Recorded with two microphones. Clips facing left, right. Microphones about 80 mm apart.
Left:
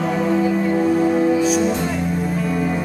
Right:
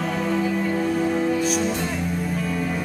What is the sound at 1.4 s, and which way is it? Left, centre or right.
Music, centre.